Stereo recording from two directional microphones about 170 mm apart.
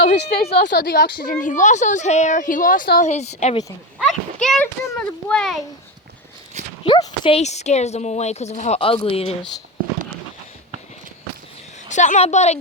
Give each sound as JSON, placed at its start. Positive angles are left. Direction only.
{"t": 0.2, "sound": "a woman's voice", "side_deg": 80}
{"t": 1.2, "sound": "a woman's voice", "side_deg": 55}
{"t": 3.9, "sound": "a child's voice", "side_deg": 0}
{"t": 6.8, "sound": "speech", "side_deg": 30}
{"t": 7.3, "sound": "a woman's voice", "side_deg": 40}
{"t": 11.9, "sound": "a woman's voice", "side_deg": 45}